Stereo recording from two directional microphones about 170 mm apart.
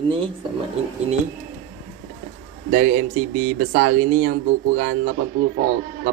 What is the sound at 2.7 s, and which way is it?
Speech, 55° right (ahead or behind).